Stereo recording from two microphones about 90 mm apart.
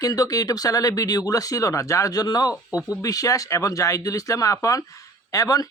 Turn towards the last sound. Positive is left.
turn(degrees=40)  # may be behind; listen again after turning